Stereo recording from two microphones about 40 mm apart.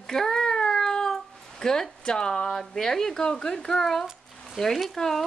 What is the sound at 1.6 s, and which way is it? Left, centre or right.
Speech, centre.